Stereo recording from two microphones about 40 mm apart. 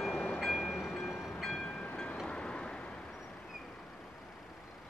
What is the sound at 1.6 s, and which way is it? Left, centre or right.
Train, left.